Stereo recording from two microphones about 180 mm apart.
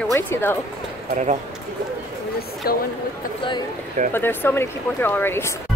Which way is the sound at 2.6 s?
60° left (ahead or behind).